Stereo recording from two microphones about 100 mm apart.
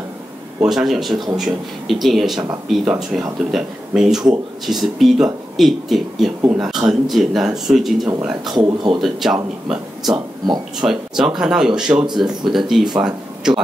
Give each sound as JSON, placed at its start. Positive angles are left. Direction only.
{"t": 0.7, "sound": "speech", "side_deg": 0}
{"t": 8.5, "sound": "speech", "side_deg": -45}
{"t": 9.0, "sound": "speech", "side_deg": -5}
{"t": 10.1, "sound": "speech", "side_deg": -45}
{"t": 10.8, "sound": "speech", "side_deg": -5}